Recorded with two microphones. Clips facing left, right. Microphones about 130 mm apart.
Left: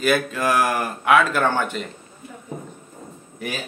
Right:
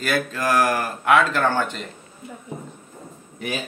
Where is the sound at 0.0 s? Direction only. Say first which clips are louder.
Left 3 dB; 10° left (ahead or behind).